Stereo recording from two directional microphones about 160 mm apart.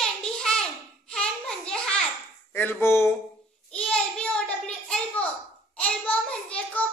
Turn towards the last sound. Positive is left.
turn(degrees=10)  # may be behind; listen again after turning